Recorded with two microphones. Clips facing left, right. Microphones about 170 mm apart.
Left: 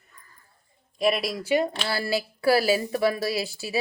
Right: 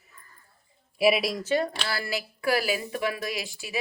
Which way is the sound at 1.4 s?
15° left (ahead or behind).